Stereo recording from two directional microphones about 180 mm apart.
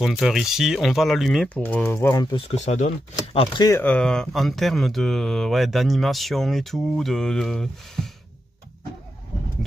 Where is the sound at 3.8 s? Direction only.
5° left (ahead or behind).